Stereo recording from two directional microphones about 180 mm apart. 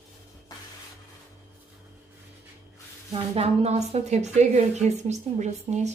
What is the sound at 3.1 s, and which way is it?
A woman's voice, 35° right (ahead or behind).